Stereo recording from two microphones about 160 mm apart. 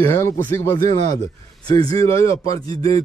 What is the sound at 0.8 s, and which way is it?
Speech, 45° right (ahead or behind).